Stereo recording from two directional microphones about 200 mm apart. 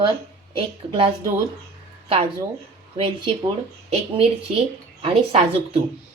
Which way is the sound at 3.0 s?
25° right (ahead or behind).